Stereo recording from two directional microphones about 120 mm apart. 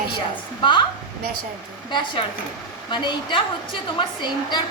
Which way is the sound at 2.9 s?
40° left (ahead or behind).